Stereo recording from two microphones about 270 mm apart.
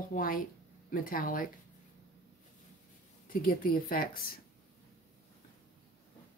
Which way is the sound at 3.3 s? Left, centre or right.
Left.